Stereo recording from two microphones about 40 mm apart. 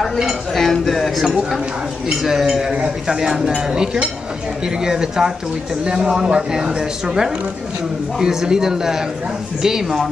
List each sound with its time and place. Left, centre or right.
0.5 s speech: centre
2.0 s speech: centre